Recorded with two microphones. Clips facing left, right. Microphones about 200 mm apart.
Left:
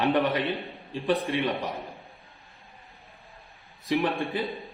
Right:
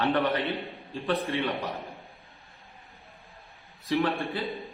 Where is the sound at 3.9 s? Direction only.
15° left (ahead or behind).